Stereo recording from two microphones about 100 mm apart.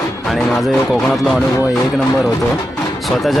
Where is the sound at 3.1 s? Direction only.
Centre (ahead or behind).